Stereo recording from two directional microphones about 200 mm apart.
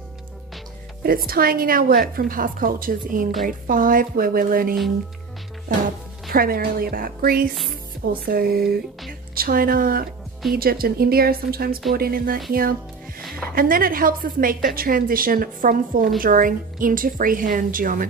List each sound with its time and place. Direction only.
1.0 s a woman's voice: 50° right (ahead or behind)
6.3 s a woman's voice: 45° right (ahead or behind)